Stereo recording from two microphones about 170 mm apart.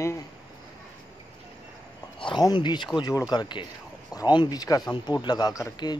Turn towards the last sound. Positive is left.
turn(degrees=20)  # may be behind; listen again after turning